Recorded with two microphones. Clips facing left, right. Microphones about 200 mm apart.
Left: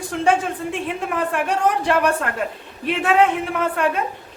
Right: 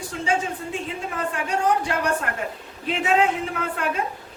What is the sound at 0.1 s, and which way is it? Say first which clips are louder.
Speech: left 6 dB; 90° left.